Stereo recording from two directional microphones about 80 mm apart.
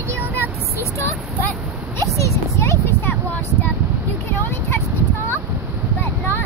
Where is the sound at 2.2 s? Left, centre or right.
Left.